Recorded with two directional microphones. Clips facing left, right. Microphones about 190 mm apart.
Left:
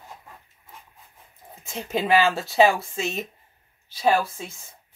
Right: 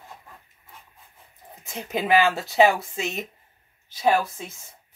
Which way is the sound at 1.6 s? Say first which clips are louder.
Left 1 dB; 20° right (ahead or behind).